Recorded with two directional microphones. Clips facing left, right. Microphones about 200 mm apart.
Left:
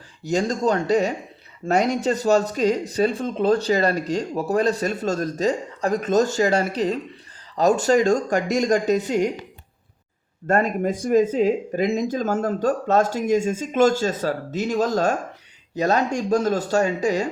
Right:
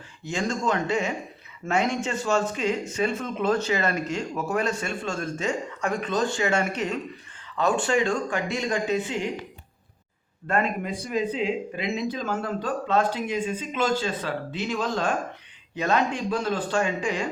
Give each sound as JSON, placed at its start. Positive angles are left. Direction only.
{"t": 0.2, "sound": "speech", "side_deg": 40}
{"t": 10.4, "sound": "speech", "side_deg": 40}